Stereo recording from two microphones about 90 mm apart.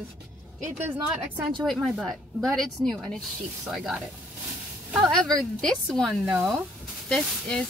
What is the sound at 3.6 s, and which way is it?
Speech, 5° right (ahead or behind).